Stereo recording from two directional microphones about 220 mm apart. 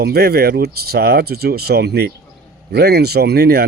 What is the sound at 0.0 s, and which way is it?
A man's voice, 45° right (ahead or behind).